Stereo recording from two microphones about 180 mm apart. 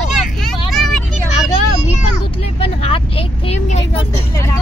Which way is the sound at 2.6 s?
30° left (ahead or behind).